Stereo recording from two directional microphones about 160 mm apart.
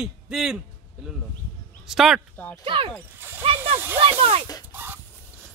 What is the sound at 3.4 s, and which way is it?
Speech, 35° right (ahead or behind).